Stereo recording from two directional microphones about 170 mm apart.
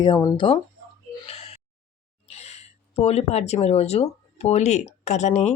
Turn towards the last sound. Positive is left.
turn(degrees=40)  # may be behind; listen again after turning